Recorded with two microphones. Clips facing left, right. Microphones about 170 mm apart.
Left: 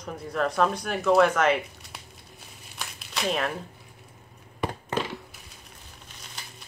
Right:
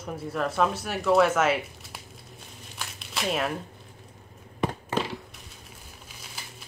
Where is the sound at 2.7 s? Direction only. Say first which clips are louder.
Even; centre (ahead or behind).